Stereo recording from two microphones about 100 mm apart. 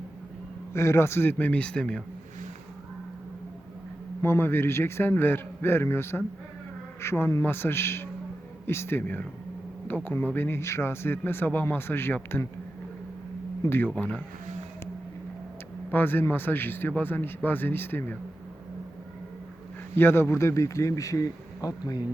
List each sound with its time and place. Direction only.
0.7 s speech: 25° left (ahead or behind); by 2.0 s 10° left (ahead or behind)
4.2 s speech: 25° left (ahead or behind)
13.7 s speech: 20° left (ahead or behind)
15.9 s speech: 20° left (ahead or behind)
20.0 s speech: 25° left (ahead or behind)